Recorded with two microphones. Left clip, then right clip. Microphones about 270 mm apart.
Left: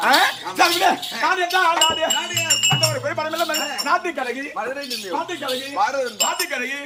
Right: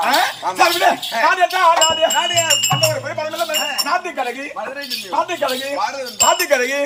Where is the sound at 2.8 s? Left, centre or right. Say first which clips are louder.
Right 3 dB; centre.